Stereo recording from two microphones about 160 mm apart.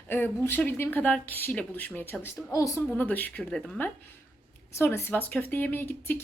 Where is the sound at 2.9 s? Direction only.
10° left (ahead or behind).